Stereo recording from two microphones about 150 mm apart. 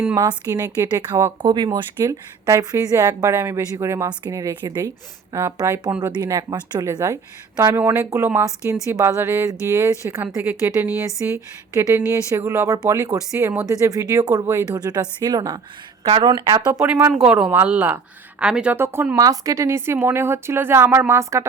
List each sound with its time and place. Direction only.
0.2 s a woman's voice: 25° right (ahead or behind)
16.8 s a woman's voice: 10° right (ahead or behind)